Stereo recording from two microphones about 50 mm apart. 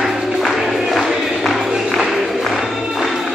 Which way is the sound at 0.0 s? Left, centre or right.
Centre.